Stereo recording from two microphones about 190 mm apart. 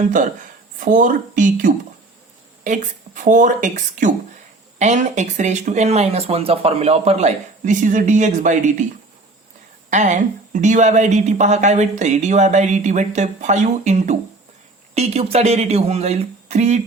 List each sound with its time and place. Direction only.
0.8 s a woman's voice: 45° right (ahead or behind)
9.9 s speech: 40° right (ahead or behind)